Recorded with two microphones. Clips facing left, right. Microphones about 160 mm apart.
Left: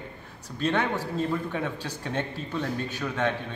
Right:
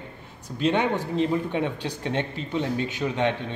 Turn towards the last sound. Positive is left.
turn(degrees=-15)  # may be behind; listen again after turning